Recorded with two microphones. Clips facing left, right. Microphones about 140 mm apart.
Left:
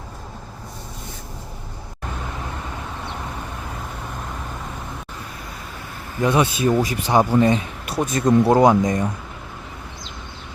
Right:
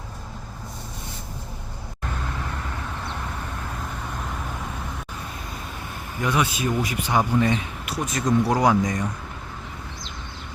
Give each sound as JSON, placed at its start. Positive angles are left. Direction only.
{"t": 6.2, "sound": "speech", "side_deg": 30}